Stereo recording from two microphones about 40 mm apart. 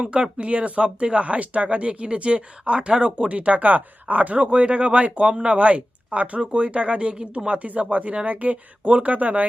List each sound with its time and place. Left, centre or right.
0.0 s speech: right
3.3 s speech: right